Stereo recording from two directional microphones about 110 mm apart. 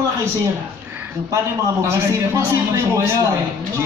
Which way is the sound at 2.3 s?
25° right (ahead or behind).